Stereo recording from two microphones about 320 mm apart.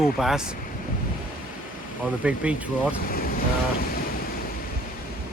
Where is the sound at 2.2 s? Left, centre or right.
Centre.